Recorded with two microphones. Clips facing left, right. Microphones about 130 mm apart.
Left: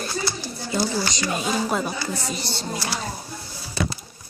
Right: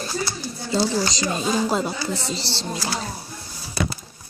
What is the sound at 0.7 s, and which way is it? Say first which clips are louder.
Speech: right 3 dB; 30° right (ahead or behind).